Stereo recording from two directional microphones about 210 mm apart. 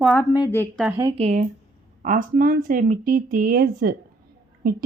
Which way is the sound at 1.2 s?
35° right (ahead or behind).